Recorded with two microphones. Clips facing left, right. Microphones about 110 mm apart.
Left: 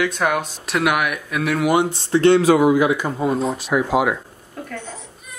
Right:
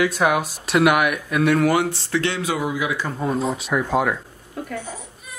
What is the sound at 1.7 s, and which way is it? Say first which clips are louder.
Speech: left 3 dB; 20° left (ahead or behind).